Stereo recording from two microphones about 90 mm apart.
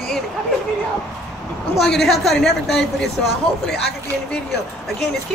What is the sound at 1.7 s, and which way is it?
A woman's voice, 5° left (ahead or behind).